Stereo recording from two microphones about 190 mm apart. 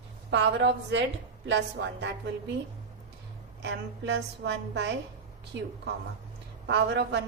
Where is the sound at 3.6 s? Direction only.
65° right (ahead or behind).